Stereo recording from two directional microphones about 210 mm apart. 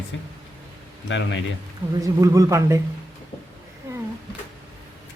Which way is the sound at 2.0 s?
15° right (ahead or behind).